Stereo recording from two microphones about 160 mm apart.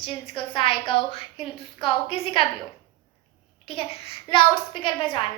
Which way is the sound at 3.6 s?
35° left (ahead or behind).